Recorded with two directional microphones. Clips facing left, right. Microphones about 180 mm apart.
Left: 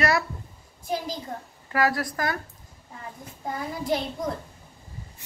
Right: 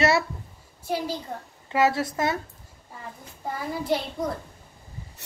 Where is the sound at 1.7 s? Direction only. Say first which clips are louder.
Right 2 dB; 25° right (ahead or behind).